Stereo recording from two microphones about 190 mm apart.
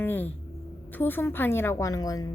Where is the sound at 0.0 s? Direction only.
10° left (ahead or behind).